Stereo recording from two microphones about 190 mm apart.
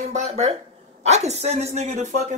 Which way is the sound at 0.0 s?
35° right (ahead or behind).